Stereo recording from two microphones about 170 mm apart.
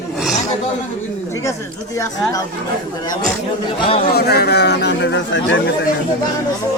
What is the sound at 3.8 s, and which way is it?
Speech, 35° left (ahead or behind).